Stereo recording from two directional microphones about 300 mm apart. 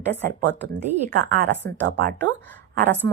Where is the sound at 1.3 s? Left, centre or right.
Right.